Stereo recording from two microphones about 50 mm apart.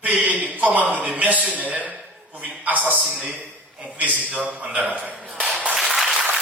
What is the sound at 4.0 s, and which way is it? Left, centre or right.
A man's voice, right.